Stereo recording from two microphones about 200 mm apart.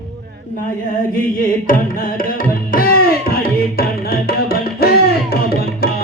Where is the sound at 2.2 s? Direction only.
45° left (ahead or behind).